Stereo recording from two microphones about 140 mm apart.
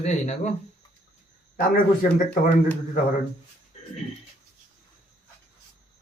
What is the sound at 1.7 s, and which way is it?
Speech, 90° left.